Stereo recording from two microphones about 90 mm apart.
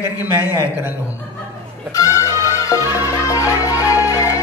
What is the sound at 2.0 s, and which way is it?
Music, 35° left (ahead or behind).